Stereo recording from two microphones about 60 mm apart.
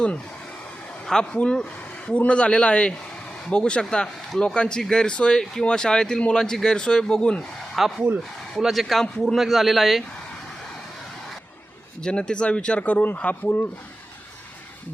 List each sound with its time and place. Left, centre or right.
1.0 s speech: centre
7.7 s speech: centre
12.0 s speech: centre; by 13.7 s left